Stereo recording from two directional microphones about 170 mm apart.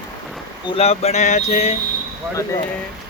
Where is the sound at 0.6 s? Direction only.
35° left (ahead or behind).